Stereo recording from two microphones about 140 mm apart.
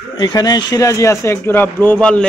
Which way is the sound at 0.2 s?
30° left (ahead or behind).